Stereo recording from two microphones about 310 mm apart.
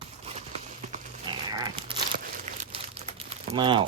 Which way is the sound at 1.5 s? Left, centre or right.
Centre.